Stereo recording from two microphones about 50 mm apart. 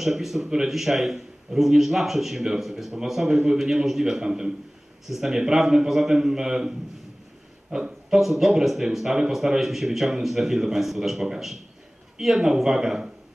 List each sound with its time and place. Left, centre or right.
0.0 s a man's voice: centre
7.7 s a man's voice: centre